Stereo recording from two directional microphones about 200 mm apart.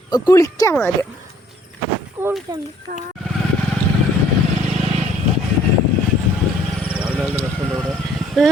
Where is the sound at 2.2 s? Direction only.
10° right (ahead or behind).